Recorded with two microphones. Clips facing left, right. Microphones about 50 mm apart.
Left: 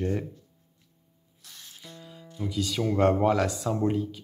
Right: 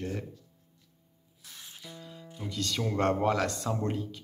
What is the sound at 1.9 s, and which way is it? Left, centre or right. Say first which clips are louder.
Music: even; centre.